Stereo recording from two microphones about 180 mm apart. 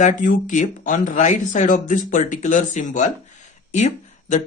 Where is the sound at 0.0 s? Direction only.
45° left (ahead or behind).